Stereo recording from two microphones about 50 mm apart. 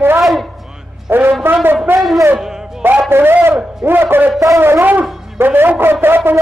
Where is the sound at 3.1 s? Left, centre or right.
Right.